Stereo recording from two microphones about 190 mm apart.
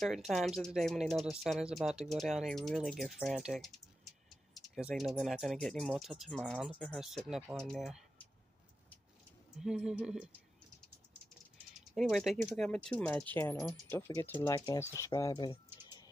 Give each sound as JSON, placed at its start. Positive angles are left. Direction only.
{"t": 0.3, "sound": "speech", "side_deg": 0}
{"t": 9.6, "sound": "speech", "side_deg": -5}
{"t": 11.7, "sound": "speech", "side_deg": 0}
{"t": 15.0, "sound": "a sound", "side_deg": 15}